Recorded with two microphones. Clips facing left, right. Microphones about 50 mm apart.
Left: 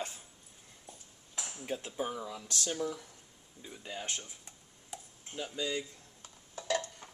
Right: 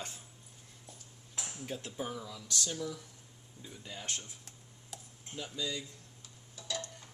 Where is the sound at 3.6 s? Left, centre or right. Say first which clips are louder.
Left 3 dB; centre.